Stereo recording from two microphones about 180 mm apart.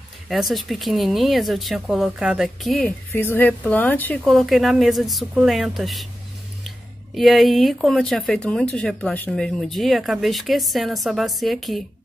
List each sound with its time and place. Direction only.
0.3 s speech: centre (ahead or behind)
3.1 s speech: 10° left (ahead or behind)
7.2 s speech: centre (ahead or behind)